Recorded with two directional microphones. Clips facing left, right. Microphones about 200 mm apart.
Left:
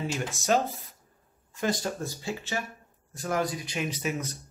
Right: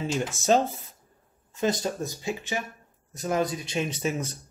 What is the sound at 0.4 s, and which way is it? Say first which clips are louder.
Speech: right 3 dB; 30° right (ahead or behind).